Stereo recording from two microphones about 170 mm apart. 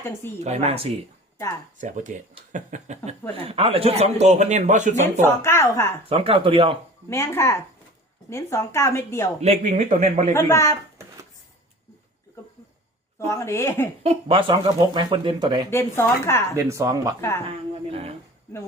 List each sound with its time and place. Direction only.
0.0 s a woman's voice: 15° left (ahead or behind)
0.3 s a man's voice: 40° right (ahead or behind)
1.8 s a man's voice: 50° right (ahead or behind)
5.2 s a woman's voice: 15° left (ahead or behind)
6.1 s a man's voice: 35° right (ahead or behind)
7.1 s a woman's voice: 15° left (ahead or behind)
9.4 s speech: 40° right (ahead or behind)
10.3 s a woman's voice: 15° left (ahead or behind)
13.1 s a woman's voice: 15° left (ahead or behind)
14.0 s speech: 35° right (ahead or behind)
15.7 s a woman's voice: 15° left (ahead or behind)
16.6 s speech: 20° right (ahead or behind)
17.2 s a woman's voice: 15° left (ahead or behind)
17.8 s a man's voice: 35° right (ahead or behind)